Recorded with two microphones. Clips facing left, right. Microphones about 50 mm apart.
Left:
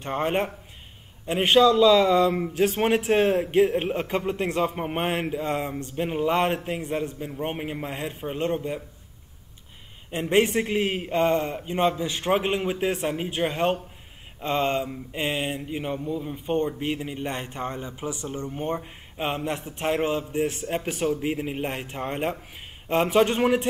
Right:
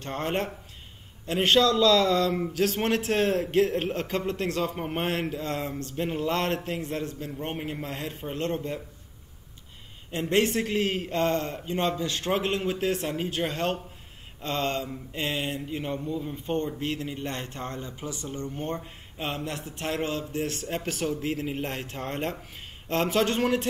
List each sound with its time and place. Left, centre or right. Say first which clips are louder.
0.0 s a man's voice: left 4 dB; centre
10.1 s a man's voice: left 3 dB; centre